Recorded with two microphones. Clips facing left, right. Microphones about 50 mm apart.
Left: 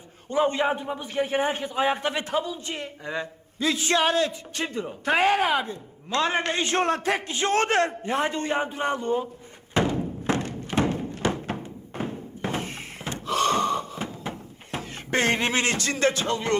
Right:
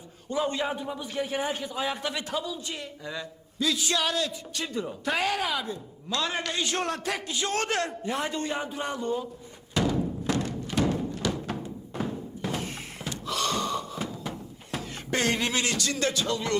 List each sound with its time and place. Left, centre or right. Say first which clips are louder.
0.3 s a man's voice: left 5 dB; left
9.7 s music: left 2 dB; left
12.4 s a sound: left 4 dB; left